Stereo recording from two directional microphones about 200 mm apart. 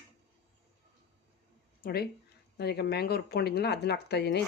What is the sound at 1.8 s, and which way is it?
Speech, 50° left (ahead or behind).